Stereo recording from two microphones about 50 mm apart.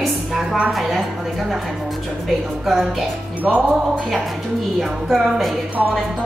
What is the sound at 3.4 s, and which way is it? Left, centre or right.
Music, right.